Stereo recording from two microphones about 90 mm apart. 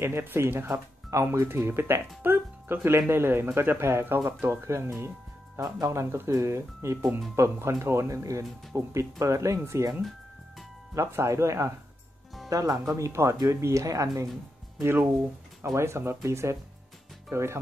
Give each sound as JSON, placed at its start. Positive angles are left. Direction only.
{"t": 0.0, "sound": "speech", "side_deg": -25}
{"t": 11.0, "sound": "speech", "side_deg": -30}
{"t": 14.8, "sound": "speech", "side_deg": -25}